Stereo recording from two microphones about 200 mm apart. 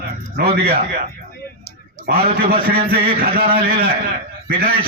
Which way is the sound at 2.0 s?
50° right (ahead or behind).